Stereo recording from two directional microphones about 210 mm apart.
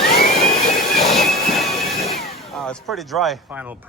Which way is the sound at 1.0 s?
Centre (ahead or behind).